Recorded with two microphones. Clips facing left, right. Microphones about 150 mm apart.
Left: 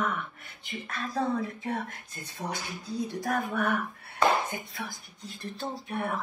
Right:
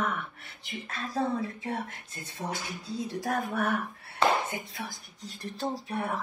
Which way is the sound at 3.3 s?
40° right (ahead or behind).